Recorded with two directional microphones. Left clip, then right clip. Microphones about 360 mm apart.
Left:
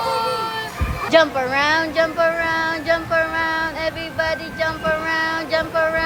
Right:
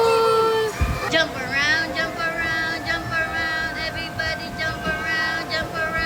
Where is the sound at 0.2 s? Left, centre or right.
Right.